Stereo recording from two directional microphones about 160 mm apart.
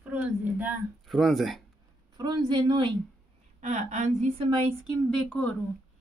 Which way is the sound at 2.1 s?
25° right (ahead or behind).